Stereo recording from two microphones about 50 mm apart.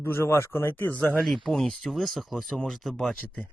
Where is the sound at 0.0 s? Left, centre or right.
Left.